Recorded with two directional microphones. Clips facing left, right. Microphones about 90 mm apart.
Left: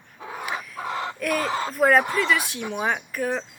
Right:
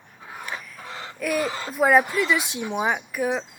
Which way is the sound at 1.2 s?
5° right (ahead or behind).